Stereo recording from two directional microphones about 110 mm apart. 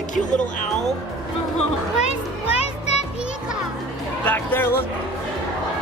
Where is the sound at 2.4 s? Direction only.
75° left (ahead or behind).